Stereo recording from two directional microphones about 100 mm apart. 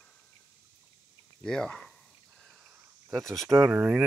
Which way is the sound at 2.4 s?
10° right (ahead or behind).